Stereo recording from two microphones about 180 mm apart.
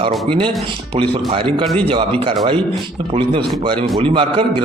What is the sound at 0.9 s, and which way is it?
Speech, 40° right (ahead or behind).